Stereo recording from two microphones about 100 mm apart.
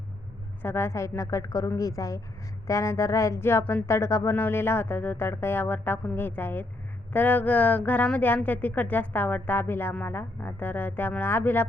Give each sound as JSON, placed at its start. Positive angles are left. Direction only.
{"t": 0.6, "sound": "a woman's voice", "side_deg": 25}
{"t": 3.8, "sound": "speech", "side_deg": 30}